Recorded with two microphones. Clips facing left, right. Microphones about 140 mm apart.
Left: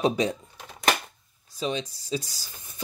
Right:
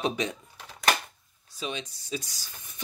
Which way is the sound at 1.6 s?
35° left (ahead or behind).